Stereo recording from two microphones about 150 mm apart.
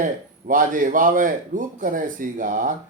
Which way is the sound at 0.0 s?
60° right (ahead or behind).